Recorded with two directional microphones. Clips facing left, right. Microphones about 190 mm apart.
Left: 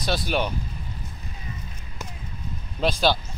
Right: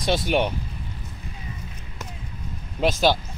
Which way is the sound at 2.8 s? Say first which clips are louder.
Right 2 dB; 15° right (ahead or behind).